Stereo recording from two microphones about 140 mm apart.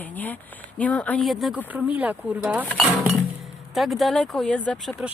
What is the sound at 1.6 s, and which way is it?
Speech, 10° right (ahead or behind).